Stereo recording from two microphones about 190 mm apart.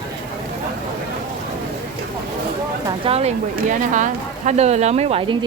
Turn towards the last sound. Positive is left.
turn(degrees=-30)  # may be behind; listen again after turning